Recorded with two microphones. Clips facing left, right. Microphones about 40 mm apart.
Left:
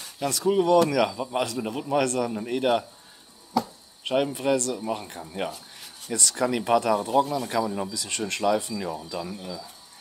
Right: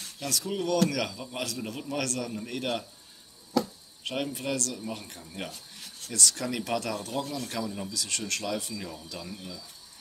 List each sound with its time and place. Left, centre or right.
0.0 s a sound: centre
0.5 s a man's voice: centre
3.6 s chop: left
4.2 s speech: centre
5.3 s rub: centre
6.3 s a man's voice: centre